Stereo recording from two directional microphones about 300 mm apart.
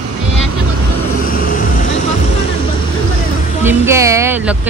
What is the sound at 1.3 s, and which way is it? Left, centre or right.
Vehicle, left.